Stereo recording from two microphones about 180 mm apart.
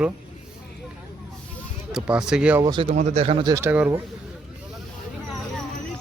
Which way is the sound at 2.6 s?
25° right (ahead or behind).